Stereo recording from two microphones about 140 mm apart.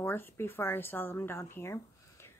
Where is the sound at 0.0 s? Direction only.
15° left (ahead or behind).